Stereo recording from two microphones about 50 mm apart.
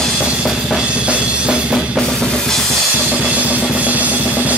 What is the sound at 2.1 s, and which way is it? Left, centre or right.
Drum kit, centre.